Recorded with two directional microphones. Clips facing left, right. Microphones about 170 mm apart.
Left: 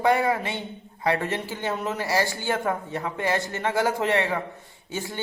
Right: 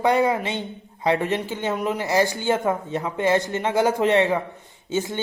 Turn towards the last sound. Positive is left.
turn(degrees=-20)  # may be behind; listen again after turning